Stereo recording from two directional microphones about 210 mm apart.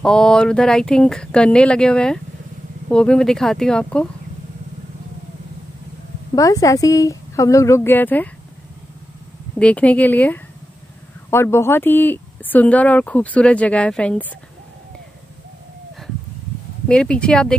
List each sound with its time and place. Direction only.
0.0 s speech: 5° left (ahead or behind)
6.3 s speech: 15° left (ahead or behind)
9.6 s speech: 5° left (ahead or behind)
16.8 s speech: 5° left (ahead or behind)